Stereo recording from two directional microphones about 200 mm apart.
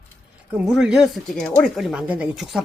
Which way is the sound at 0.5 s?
5° right (ahead or behind).